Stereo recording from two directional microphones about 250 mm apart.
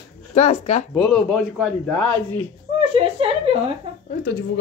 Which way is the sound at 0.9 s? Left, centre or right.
Centre.